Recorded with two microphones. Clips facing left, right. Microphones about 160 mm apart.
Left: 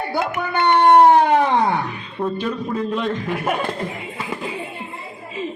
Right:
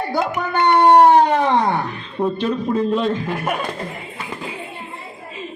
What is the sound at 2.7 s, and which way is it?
Speech, 30° right (ahead or behind).